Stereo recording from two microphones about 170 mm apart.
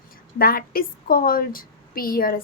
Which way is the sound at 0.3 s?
60° left (ahead or behind).